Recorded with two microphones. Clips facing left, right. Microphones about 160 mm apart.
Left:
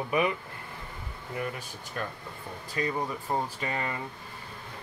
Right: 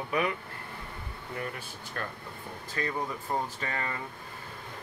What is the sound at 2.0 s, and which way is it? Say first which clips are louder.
Speech: left 2 dB; 15° left (ahead or behind).